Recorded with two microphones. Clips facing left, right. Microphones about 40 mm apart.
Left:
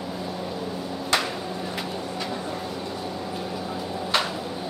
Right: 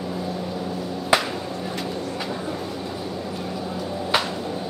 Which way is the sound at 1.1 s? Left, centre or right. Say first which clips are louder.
Right 4 dB; centre.